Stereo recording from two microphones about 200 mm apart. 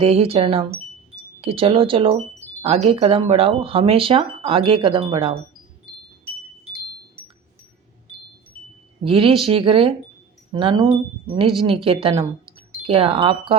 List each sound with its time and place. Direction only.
0.0 s speech: 30° right (ahead or behind)
9.0 s speech: 25° right (ahead or behind)
12.1 s a sound: 15° right (ahead or behind)
12.8 s speech: 30° right (ahead or behind)